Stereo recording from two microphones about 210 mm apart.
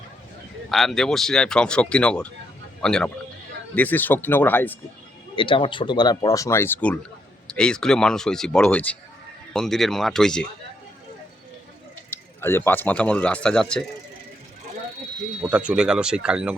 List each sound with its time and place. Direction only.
0.7 s speech: centre (ahead or behind)
5.4 s speech: 25° left (ahead or behind); by 10.4 s 5° left (ahead or behind)
12.1 s speech: 10° left (ahead or behind)
15.4 s speech: 5° right (ahead or behind)